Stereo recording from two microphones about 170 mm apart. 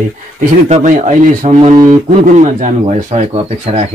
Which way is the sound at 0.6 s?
45° right (ahead or behind).